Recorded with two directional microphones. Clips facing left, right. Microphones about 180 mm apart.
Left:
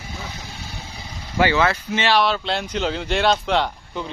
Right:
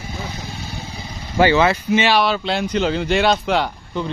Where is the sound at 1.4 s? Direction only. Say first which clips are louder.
Right 4 dB; 30° right (ahead or behind).